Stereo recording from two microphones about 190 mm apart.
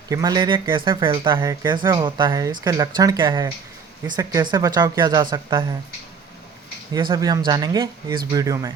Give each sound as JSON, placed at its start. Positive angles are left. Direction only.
{"t": 0.1, "sound": "speech", "side_deg": -20}
{"t": 6.9, "sound": "speech", "side_deg": -20}